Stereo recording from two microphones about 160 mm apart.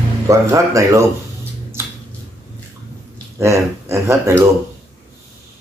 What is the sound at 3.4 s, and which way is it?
Speech, 15° right (ahead or behind).